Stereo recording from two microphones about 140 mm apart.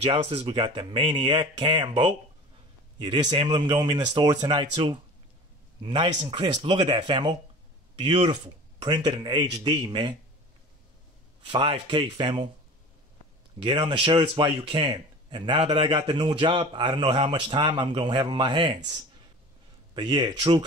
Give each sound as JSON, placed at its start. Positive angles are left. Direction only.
{"t": 0.0, "sound": "a man's voice", "side_deg": -45}
{"t": 8.8, "sound": "a man's voice", "side_deg": -30}
{"t": 11.5, "sound": "a man's voice", "side_deg": -35}
{"t": 13.6, "sound": "a man's voice", "side_deg": -35}
{"t": 19.9, "sound": "a man's voice", "side_deg": -30}